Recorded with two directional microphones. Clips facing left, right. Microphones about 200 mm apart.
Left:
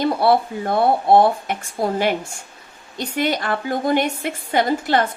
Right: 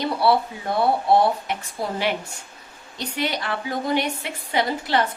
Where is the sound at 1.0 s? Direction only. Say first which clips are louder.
Left 4 dB; 50° left (ahead or behind).